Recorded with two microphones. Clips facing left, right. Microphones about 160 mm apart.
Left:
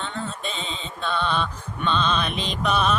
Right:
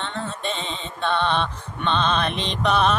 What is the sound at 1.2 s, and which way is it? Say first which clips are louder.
Music: even; 30° right (ahead or behind).